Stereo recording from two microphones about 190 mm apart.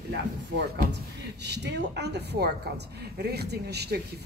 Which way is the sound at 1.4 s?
65° right (ahead or behind).